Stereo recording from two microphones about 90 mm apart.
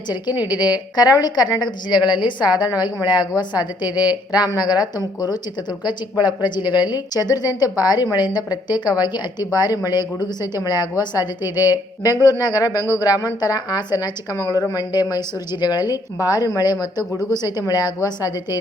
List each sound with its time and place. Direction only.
0.4 s speech: 50° left (ahead or behind)
11.4 s speech: 20° right (ahead or behind)
12.2 s speech: 45° left (ahead or behind)